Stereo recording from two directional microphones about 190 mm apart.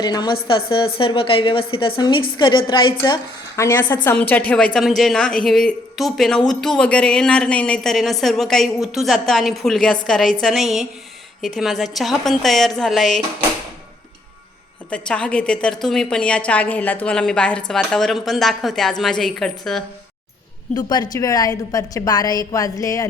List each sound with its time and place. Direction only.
0.0 s a woman's voice: 20° left (ahead or behind)
3.6 s a woman's voice: 10° left (ahead or behind)
14.8 s a woman's voice: 5° left (ahead or behind)
20.7 s a woman's voice: 20° left (ahead or behind)